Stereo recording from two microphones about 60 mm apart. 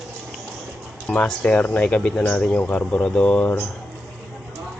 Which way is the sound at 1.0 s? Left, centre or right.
Left.